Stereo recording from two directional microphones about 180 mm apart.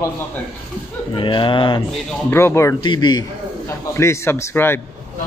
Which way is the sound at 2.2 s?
15° left (ahead or behind).